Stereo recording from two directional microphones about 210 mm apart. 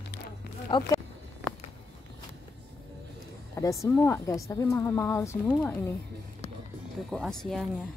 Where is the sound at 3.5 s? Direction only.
15° left (ahead or behind).